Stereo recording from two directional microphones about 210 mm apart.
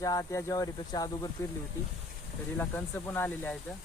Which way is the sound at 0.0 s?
15° left (ahead or behind).